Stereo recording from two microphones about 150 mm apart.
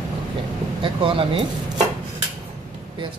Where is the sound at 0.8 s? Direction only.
35° right (ahead or behind).